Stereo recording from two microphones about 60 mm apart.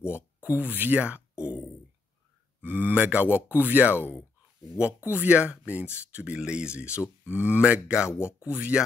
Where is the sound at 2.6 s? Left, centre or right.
Right.